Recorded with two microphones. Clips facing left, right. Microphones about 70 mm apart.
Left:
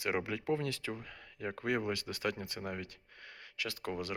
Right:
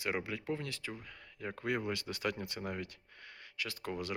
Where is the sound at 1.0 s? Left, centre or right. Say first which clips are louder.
Left 2 dB; left.